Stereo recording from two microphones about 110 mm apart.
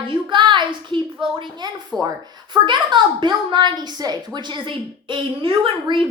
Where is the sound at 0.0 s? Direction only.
50° right (ahead or behind).